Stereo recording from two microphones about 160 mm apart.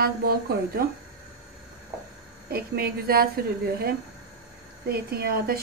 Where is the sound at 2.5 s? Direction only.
70° right (ahead or behind).